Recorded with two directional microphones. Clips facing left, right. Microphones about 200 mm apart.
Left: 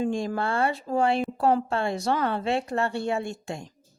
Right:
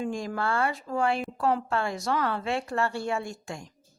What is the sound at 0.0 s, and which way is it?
Speech, 30° left (ahead or behind).